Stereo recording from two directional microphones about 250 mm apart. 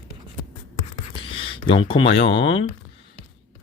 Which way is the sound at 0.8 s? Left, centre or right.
Left.